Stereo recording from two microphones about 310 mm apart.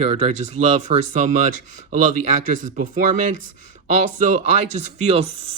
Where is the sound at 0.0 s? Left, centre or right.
Right.